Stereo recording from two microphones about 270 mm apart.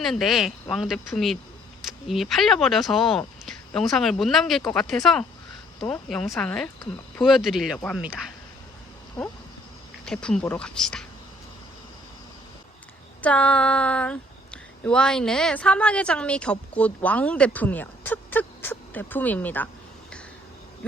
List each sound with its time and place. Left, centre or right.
0.0 s speech: centre
9.2 s a sound: centre
10.1 s speech: centre
13.2 s speech: centre